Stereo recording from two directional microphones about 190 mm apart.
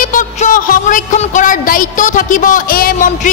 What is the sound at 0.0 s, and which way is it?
A woman's voice, 45° left (ahead or behind).